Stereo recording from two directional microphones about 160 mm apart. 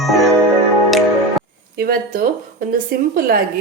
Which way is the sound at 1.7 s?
70° right (ahead or behind).